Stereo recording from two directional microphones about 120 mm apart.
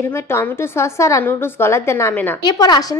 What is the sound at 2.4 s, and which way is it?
Speech, 35° left (ahead or behind).